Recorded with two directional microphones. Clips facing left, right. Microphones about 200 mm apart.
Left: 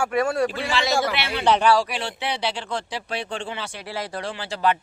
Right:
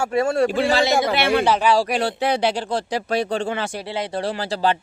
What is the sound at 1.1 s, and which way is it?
Speech, 50° right (ahead or behind).